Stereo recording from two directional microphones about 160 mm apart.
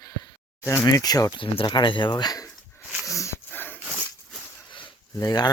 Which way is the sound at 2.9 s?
Centre (ahead or behind).